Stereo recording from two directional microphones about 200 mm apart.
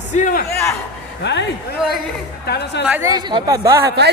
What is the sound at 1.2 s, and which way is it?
Speech, 60° left (ahead or behind).